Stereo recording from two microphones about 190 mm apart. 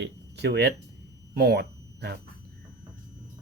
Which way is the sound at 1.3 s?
55° right (ahead or behind).